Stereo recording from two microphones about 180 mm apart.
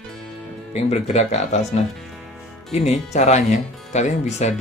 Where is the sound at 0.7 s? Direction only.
40° left (ahead or behind).